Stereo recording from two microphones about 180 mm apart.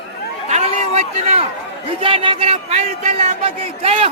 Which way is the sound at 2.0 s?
30° right (ahead or behind).